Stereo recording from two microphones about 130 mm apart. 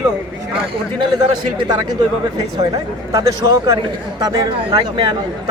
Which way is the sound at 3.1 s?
25° right (ahead or behind).